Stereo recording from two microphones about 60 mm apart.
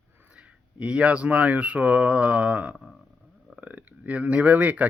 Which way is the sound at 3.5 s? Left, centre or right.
Right.